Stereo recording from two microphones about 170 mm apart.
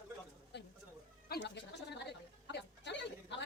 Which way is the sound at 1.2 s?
80° left.